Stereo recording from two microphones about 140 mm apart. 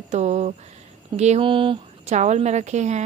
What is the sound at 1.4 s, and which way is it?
Speech, 35° right (ahead or behind).